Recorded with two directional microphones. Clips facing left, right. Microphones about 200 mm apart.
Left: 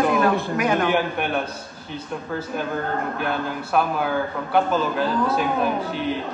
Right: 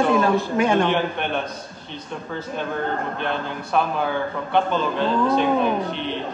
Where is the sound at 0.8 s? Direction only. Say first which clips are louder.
Left 1 dB; 5° left (ahead or behind).